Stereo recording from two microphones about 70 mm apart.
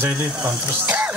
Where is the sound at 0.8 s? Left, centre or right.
Centre.